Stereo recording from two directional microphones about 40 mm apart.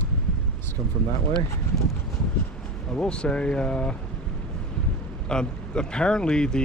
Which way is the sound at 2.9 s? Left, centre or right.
Left.